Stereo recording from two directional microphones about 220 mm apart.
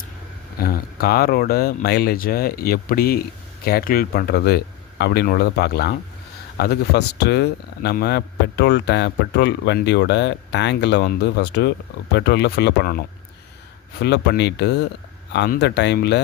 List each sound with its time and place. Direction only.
0.6 s speech: 45° left (ahead or behind)